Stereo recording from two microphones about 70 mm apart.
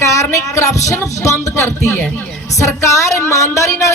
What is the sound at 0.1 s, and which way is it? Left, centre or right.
Speech, left.